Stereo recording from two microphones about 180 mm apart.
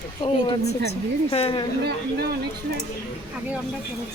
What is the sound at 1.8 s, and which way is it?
Speech, 60° right (ahead or behind).